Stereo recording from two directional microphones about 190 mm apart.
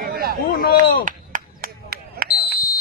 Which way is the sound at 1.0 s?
45° right (ahead or behind).